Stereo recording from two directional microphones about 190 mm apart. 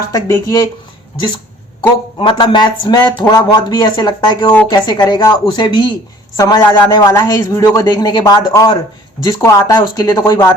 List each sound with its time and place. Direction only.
0.1 s speech: 20° left (ahead or behind)
2.1 s a man's voice: 25° left (ahead or behind)